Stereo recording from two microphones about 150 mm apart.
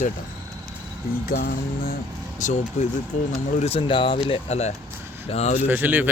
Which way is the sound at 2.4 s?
55° left (ahead or behind).